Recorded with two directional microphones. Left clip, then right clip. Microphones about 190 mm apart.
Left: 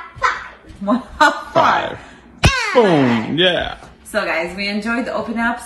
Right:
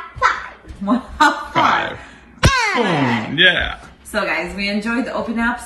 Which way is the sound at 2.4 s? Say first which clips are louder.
Right 1 dB; 30° right (ahead or behind).